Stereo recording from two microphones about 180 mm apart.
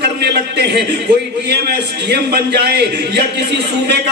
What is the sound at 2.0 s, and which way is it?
A man's voice, 65° right (ahead or behind).